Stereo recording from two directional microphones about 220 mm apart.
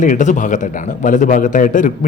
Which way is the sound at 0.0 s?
35° left (ahead or behind).